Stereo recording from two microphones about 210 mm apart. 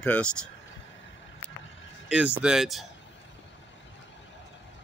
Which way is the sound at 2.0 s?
5° right (ahead or behind).